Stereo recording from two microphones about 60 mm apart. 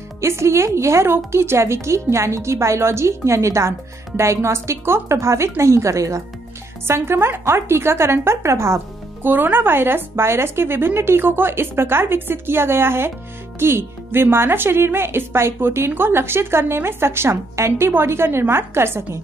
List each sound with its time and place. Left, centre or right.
0.2 s speech: right
6.9 s speech: right
9.2 s a woman's voice: right